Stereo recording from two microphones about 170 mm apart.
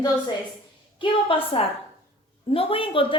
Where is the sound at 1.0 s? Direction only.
30° left (ahead or behind).